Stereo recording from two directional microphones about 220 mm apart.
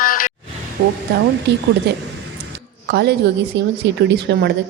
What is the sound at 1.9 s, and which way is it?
A woman's voice, 50° right (ahead or behind).